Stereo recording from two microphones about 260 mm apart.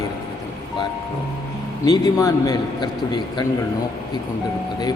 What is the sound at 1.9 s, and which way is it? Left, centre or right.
A man's voice, centre.